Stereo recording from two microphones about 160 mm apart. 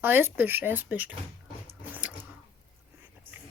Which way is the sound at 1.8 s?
10° right (ahead or behind).